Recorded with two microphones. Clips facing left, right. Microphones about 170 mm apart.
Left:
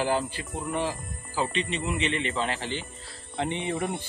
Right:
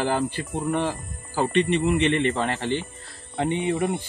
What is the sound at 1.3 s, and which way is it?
Speech, 60° right (ahead or behind).